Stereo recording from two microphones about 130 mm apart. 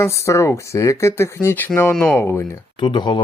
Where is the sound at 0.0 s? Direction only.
20° left (ahead or behind).